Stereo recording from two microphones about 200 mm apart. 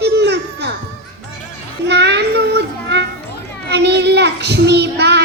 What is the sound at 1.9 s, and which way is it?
Child singing, 55° right (ahead or behind).